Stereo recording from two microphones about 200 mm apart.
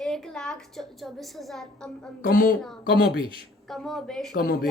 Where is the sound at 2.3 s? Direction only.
45° left (ahead or behind).